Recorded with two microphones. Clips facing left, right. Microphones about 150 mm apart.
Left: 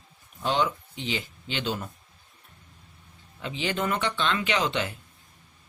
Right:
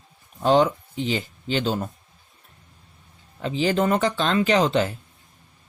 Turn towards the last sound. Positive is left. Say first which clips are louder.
# right 8 dB
turn(degrees=-40)  # may be behind; listen again after turning